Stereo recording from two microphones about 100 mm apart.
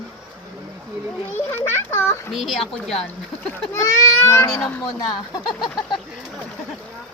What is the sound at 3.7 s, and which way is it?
Speech, 30° left (ahead or behind).